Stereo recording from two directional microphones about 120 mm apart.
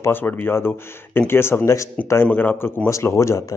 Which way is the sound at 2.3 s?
15° left (ahead or behind).